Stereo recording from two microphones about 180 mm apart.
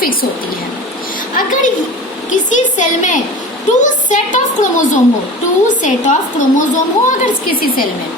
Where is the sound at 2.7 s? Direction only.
45° left (ahead or behind).